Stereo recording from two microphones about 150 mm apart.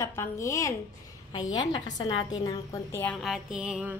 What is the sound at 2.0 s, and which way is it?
A woman's voice, 30° left (ahead or behind).